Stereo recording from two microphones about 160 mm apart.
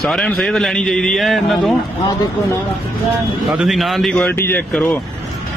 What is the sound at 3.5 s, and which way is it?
A man's voice, centre (ahead or behind).